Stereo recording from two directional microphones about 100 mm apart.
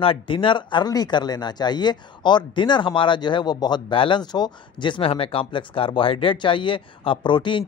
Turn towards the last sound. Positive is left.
turn(degrees=50)  # may be behind; listen again after turning